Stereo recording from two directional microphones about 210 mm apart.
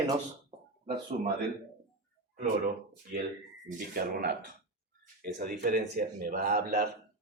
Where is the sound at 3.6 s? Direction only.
45° right (ahead or behind).